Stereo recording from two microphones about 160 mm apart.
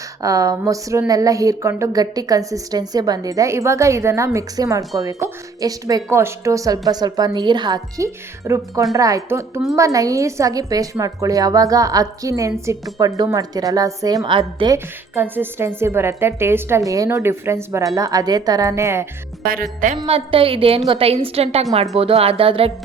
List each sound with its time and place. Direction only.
0.2 s speech: 20° right (ahead or behind)
15.1 s a woman's voice: 15° right (ahead or behind)
19.5 s speech: 60° right (ahead or behind)
20.0 s a woman's voice: 35° right (ahead or behind)